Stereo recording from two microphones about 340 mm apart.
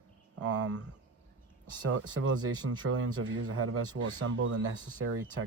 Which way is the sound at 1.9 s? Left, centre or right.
Right.